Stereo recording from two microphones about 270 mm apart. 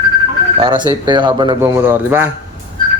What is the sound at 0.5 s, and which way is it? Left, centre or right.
Speech, centre.